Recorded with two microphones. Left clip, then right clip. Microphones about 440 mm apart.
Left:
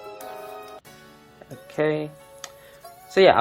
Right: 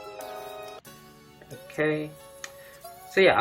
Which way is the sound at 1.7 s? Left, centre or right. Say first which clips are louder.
Left 3 dB; centre.